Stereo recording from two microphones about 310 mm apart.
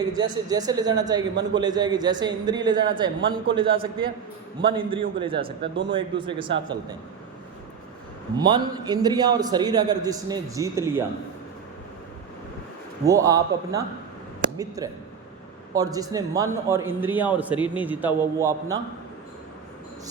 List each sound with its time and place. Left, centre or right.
0.0 s a man's voice: centre
8.4 s a man's voice: centre
13.1 s a man's voice: centre